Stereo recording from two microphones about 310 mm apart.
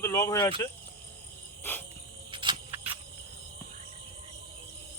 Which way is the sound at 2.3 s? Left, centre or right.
Centre.